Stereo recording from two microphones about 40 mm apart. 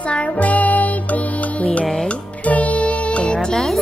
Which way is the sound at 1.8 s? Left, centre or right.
Centre.